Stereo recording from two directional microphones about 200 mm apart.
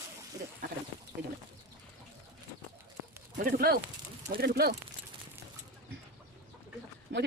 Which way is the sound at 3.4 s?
45° right (ahead or behind).